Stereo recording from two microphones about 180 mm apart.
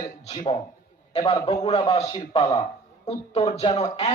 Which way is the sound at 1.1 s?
35° left (ahead or behind).